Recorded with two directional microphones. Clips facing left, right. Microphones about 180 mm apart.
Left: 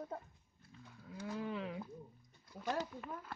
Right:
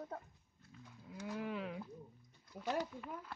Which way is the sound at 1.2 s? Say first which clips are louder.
Left 1 dB; 5° right (ahead or behind).